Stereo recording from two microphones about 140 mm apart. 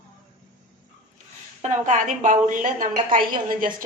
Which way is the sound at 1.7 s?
60° right (ahead or behind).